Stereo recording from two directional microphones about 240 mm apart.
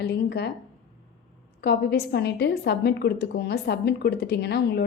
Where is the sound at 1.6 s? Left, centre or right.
Left.